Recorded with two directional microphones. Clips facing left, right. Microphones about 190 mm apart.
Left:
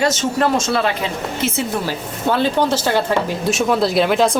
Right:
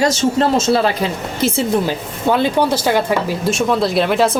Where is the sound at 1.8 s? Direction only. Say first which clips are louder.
Right 3 dB; 15° right (ahead or behind).